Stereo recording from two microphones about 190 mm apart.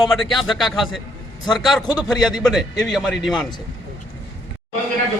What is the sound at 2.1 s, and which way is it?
Speech, centre (ahead or behind).